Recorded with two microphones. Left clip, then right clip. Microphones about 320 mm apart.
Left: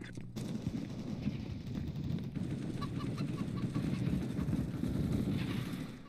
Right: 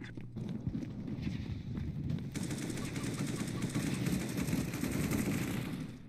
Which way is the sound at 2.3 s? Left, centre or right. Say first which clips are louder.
Right 5 dB; right.